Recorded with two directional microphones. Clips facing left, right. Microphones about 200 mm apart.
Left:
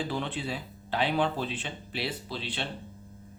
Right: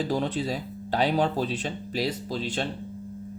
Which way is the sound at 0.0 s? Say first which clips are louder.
Right 6 dB; 40° right (ahead or behind).